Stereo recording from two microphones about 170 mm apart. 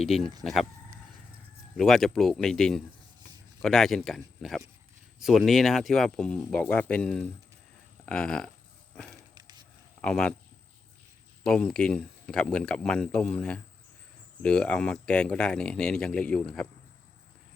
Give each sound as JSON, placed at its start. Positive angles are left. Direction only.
{"t": 0.0, "sound": "speech", "side_deg": 0}
{"t": 1.7, "sound": "speech", "side_deg": 0}
{"t": 8.0, "sound": "a sound", "side_deg": 5}
{"t": 9.0, "sound": "dog", "side_deg": -25}
{"t": 10.0, "sound": "speech", "side_deg": 5}
{"t": 11.4, "sound": "speech", "side_deg": 5}